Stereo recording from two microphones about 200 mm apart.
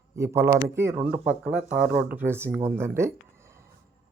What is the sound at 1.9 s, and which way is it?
Speech, 35° right (ahead or behind).